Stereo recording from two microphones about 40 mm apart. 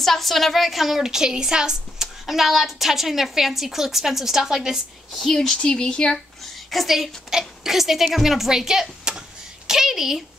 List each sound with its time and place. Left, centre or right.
0.0 s a woman's voice: centre
2.2 s a woman's voice: centre
5.2 s speech: centre
5.6 s speech: left
6.7 s speech: centre
9.7 s a sound: centre